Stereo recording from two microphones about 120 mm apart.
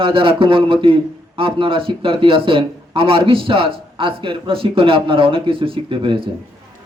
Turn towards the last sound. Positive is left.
turn(degrees=-45)  # may be behind; listen again after turning